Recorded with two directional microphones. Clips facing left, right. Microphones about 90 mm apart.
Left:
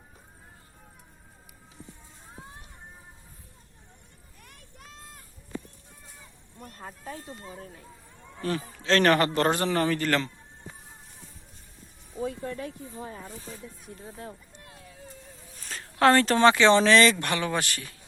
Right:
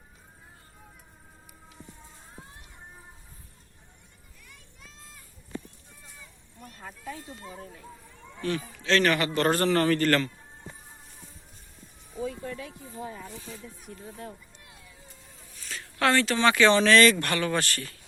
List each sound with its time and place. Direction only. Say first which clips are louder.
4.4 s a sound: left 3 dB; 55° left (ahead or behind)
6.6 s speech: left 2 dB; 40° left (ahead or behind)
9.5 s speech: right 2 dB; 15° left (ahead or behind)
12.2 s speech: left 2 dB; 45° left (ahead or behind)
14.5 s a sound: left 4 dB; 45° left (ahead or behind)
15.8 s speech: left 4 dB; 35° left (ahead or behind)
16.5 s speech: even; 25° left (ahead or behind)